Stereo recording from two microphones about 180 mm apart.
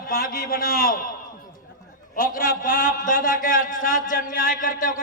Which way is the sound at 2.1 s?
50° left (ahead or behind).